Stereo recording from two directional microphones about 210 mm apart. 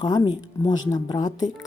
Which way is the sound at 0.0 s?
20° left (ahead or behind).